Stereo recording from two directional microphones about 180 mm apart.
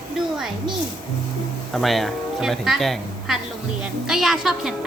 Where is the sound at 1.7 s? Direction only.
Centre (ahead or behind).